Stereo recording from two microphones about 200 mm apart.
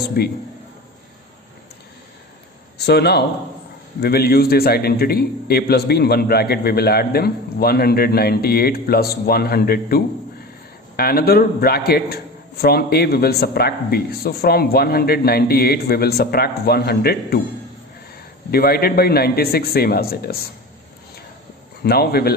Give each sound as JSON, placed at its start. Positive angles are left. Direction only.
{"t": 0.2, "sound": "a man's voice", "side_deg": 50}
{"t": 2.7, "sound": "a man's voice", "side_deg": 55}
{"t": 18.5, "sound": "a man's voice", "side_deg": 50}
{"t": 21.8, "sound": "a man's voice", "side_deg": 50}